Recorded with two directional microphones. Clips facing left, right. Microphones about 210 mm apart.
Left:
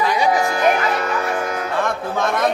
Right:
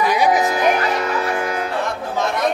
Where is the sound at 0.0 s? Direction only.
15° right (ahead or behind).